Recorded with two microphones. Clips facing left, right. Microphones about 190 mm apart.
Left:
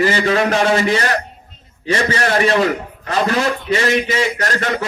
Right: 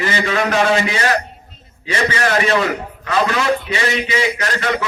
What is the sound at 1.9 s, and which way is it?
A man's voice, 40° left (ahead or behind).